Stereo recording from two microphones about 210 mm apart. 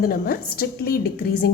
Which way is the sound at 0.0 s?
45° left (ahead or behind).